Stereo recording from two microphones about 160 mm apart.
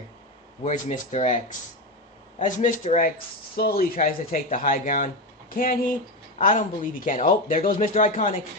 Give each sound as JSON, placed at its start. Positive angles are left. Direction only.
{"t": 0.6, "sound": "speech", "side_deg": 45}
{"t": 3.6, "sound": "speech", "side_deg": 65}
{"t": 6.4, "sound": "speech", "side_deg": 55}